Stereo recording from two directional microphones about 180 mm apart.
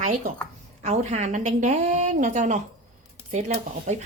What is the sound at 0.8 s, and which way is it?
A woman's voice, 35° right (ahead or behind).